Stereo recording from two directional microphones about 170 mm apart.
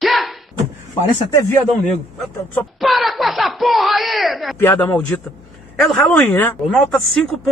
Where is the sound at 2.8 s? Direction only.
Centre (ahead or behind).